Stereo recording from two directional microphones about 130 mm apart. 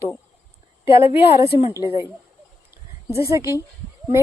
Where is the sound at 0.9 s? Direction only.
45° left (ahead or behind).